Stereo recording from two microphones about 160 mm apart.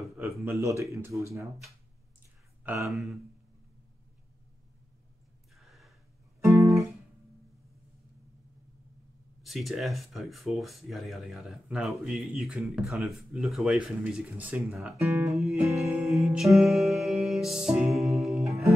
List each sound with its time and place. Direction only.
0.4 s speech: 20° right (ahead or behind)
2.6 s speech: 15° right (ahead or behind)
2.9 s speech: centre (ahead or behind)
5.6 s gasp: centre (ahead or behind)
6.4 s guitar: 15° right (ahead or behind)
9.4 s speech: centre (ahead or behind)
15.0 s speech: 20° right (ahead or behind)
15.3 s speech: centre (ahead or behind)
16.5 s music: centre (ahead or behind)